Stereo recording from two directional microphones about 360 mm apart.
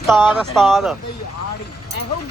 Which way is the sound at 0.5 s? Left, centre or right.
Centre.